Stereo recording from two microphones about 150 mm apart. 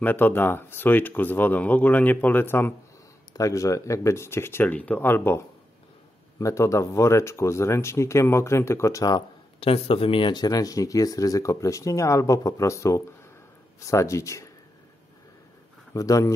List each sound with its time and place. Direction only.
0.0 s speech: 10° left (ahead or behind)
9.6 s speech: 40° left (ahead or behind); by 14.5 s 20° left (ahead or behind)
15.9 s speech: 20° left (ahead or behind)